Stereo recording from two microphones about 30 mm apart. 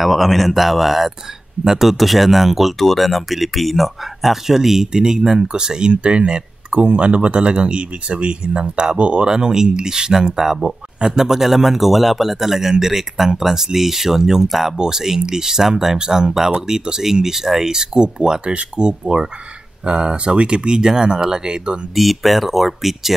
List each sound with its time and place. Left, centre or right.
0.0 s speech: centre
4.9 s speech: right
9.2 s a man's voice: right
11.0 s a man's voice: right
11.2 s a man's voice: centre
18.4 s speech: right
21.9 s speech: centre